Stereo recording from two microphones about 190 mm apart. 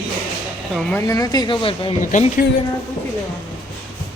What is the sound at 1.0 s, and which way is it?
Speech, 20° left (ahead or behind).